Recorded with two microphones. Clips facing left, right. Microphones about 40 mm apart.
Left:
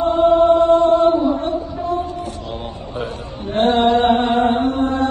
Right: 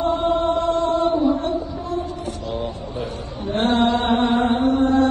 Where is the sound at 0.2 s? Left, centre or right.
Left.